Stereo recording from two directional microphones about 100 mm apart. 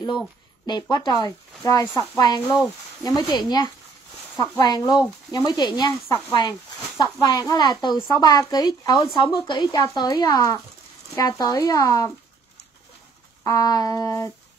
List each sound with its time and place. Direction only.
0.7 s speech: 50° left (ahead or behind)
2.4 s speech: centre (ahead or behind)
3.0 s speech: 40° left (ahead or behind)
9.1 s speech: 55° left (ahead or behind); by 12.1 s 35° left (ahead or behind)
13.4 s speech: 35° left (ahead or behind)